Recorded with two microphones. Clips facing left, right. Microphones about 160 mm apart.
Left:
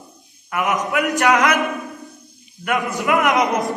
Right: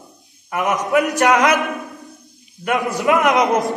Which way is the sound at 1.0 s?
20° right (ahead or behind).